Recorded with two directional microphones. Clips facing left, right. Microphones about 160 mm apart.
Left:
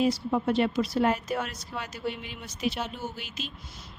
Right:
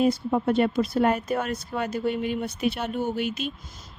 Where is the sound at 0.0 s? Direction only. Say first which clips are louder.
Right 3 dB; 50° right (ahead or behind).